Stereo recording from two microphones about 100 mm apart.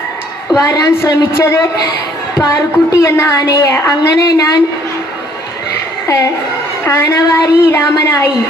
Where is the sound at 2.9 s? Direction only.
30° left (ahead or behind).